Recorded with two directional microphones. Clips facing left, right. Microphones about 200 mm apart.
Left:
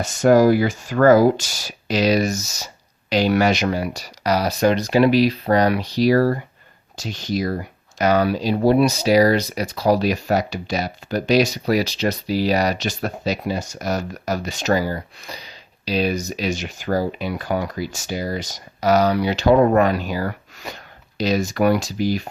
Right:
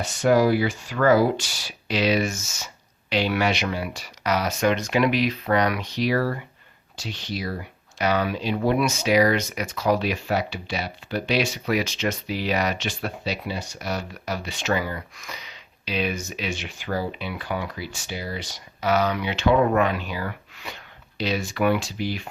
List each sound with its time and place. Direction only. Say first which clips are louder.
0.0 s speech: left 5 dB; 45° left (ahead or behind)